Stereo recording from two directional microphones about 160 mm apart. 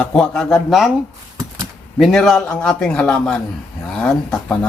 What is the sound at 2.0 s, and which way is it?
Speech, centre (ahead or behind).